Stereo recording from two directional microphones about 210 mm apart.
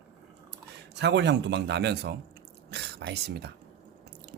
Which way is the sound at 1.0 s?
55° right (ahead or behind).